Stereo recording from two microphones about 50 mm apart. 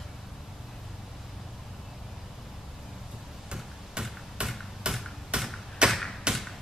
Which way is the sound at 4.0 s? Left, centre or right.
Centre.